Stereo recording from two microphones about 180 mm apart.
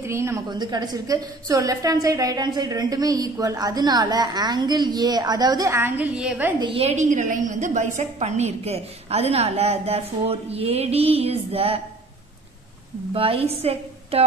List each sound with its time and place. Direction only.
0.0 s a woman's voice: 15° right (ahead or behind)
6.6 s a woman's voice: 30° right (ahead or behind)
13.1 s a woman's voice: 30° right (ahead or behind)